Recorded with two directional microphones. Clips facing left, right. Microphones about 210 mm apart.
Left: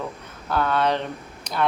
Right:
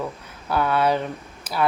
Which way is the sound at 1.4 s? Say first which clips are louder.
Right 1 dB; 5° right (ahead or behind).